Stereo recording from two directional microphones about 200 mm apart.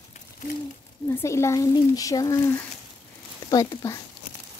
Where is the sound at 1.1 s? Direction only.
15° left (ahead or behind).